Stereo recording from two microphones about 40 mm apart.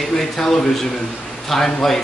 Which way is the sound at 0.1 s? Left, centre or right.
Centre.